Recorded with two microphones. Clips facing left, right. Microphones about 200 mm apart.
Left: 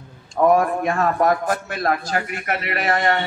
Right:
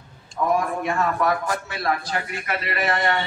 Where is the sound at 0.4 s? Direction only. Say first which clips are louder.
Left 7 dB; 60° left (ahead or behind).